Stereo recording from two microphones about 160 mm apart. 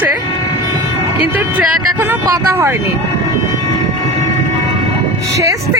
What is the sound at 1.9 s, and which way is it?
Speech, 20° right (ahead or behind).